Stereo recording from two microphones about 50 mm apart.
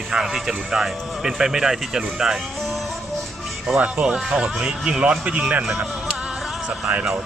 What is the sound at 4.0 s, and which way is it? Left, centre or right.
Speech, centre.